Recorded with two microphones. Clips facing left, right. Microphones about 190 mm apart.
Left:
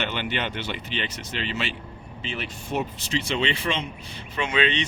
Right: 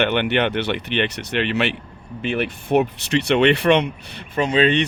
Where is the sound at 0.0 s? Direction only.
65° right (ahead or behind).